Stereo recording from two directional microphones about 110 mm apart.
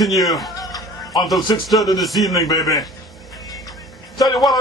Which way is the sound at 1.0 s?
Centre (ahead or behind).